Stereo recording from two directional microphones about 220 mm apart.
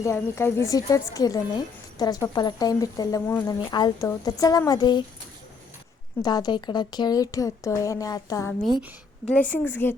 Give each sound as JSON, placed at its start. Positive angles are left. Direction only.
{"t": 0.0, "sound": "speech", "side_deg": 10}
{"t": 6.2, "sound": "speech", "side_deg": 20}